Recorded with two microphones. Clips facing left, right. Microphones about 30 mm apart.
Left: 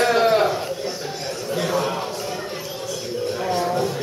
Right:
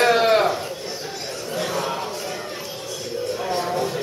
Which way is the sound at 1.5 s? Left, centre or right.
Centre.